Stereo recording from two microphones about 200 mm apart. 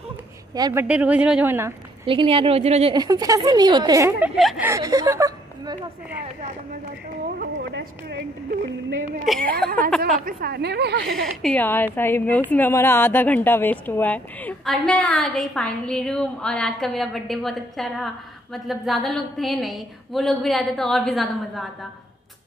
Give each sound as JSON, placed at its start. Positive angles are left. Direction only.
{"t": 0.6, "sound": "a woman's voice", "side_deg": -20}
{"t": 0.8, "sound": "speech", "side_deg": -5}
{"t": 2.0, "sound": "a woman's voice", "side_deg": -25}
{"t": 4.4, "sound": "a woman's voice", "side_deg": 0}
{"t": 4.6, "sound": "speech", "side_deg": -15}
{"t": 7.3, "sound": "speech", "side_deg": -60}
{"t": 9.2, "sound": "a woman's voice", "side_deg": 0}
{"t": 10.2, "sound": "a woman's voice", "side_deg": -55}
{"t": 11.4, "sound": "a woman's voice", "side_deg": 10}